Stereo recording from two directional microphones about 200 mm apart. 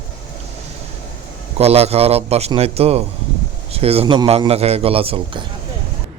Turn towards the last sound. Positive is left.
turn(degrees=-30)  # may be behind; listen again after turning